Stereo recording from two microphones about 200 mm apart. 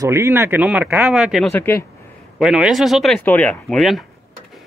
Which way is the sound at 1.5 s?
10° left (ahead or behind).